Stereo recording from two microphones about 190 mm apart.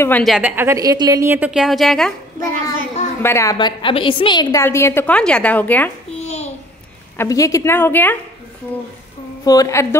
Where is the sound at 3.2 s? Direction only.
15° left (ahead or behind).